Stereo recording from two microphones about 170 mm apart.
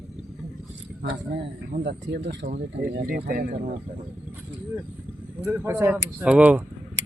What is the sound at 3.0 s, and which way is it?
Speech, 55° right (ahead or behind).